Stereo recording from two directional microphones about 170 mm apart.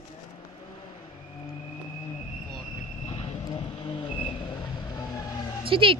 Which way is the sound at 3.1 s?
35° left (ahead or behind).